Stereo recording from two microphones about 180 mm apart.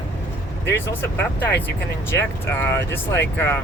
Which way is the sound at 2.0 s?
15° left (ahead or behind).